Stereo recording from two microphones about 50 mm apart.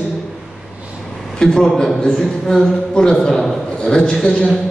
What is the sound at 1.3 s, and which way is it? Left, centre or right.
A man's voice, centre.